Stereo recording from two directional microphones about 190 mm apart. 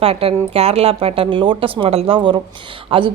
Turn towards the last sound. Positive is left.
turn(degrees=-25)  # may be behind; listen again after turning